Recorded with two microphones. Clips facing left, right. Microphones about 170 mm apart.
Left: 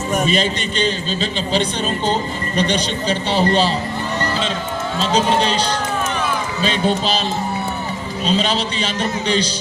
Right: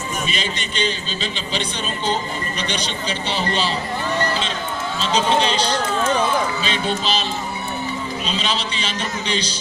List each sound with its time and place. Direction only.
0.2 s a man's voice: 40° left (ahead or behind)
6.6 s speech: 40° left (ahead or behind)
8.3 s a man's voice: 40° left (ahead or behind)